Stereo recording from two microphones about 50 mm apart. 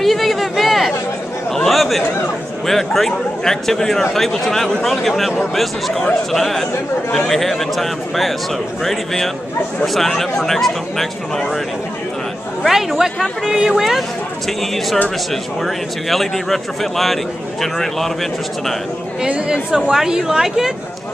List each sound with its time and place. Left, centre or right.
0.0 s a sound: centre
1.5 s chatter: centre
2.6 s speech: centre
12.6 s speech: centre
15.6 s speech: centre
19.2 s speech: right
19.7 s speech: centre